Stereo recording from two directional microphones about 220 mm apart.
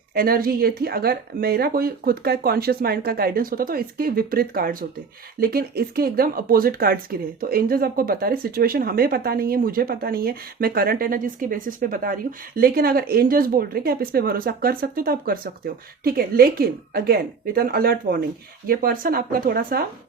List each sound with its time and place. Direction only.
0.1 s a woman's voice: 40° right (ahead or behind)